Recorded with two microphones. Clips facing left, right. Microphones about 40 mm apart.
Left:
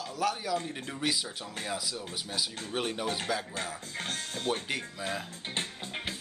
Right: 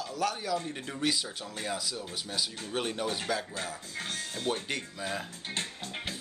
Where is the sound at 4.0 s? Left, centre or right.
Left.